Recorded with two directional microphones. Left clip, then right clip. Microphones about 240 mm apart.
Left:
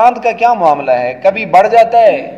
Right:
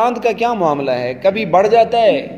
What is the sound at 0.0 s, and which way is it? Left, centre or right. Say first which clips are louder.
A man's voice: left 6 dB; right.